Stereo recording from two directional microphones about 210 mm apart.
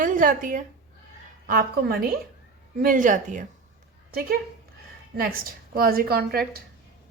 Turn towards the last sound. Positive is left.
turn(degrees=-45)  # may be behind; listen again after turning